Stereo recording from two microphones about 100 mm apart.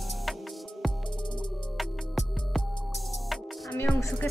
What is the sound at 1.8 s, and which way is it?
Music, centre (ahead or behind).